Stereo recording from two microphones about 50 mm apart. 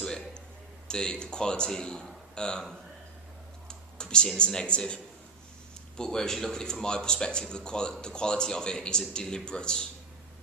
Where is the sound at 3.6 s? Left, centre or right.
Centre.